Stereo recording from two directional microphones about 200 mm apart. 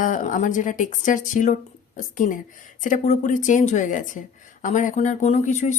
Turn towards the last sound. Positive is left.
turn(degrees=35)  # may be behind; listen again after turning